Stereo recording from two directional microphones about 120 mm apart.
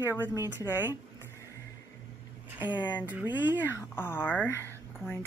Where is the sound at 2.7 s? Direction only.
40° left (ahead or behind).